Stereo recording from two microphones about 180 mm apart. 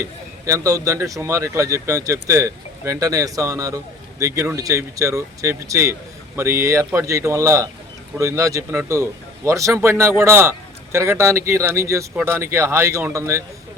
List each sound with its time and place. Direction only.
0.0 s a man's voice: 15° right (ahead or behind)